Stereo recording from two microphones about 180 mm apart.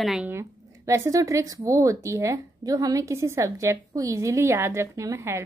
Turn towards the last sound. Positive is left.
turn(degrees=-15)  # may be behind; listen again after turning